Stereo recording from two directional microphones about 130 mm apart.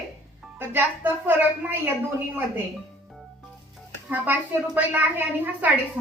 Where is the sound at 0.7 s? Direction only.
15° right (ahead or behind).